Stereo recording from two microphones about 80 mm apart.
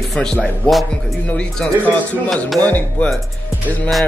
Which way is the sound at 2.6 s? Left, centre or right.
Centre.